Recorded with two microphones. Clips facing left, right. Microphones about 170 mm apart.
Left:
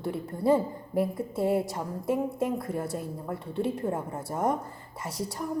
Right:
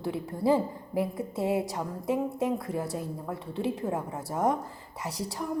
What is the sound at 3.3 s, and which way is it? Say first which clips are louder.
Speech: left 2 dB; 55° left (ahead or behind).